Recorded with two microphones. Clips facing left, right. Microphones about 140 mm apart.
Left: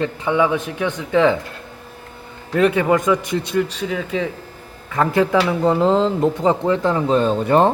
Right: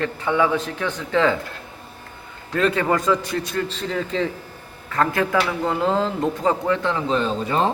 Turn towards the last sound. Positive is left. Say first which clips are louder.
# left 6 dB
turn(degrees=55)  # may be behind; listen again after turning